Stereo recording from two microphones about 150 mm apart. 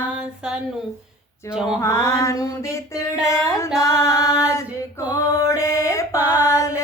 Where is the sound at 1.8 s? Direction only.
20° left (ahead or behind).